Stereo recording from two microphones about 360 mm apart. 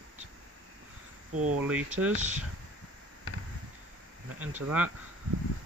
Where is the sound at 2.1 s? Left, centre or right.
Centre.